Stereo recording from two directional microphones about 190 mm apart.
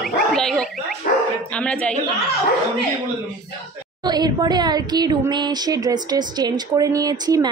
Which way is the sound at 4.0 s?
20° right (ahead or behind).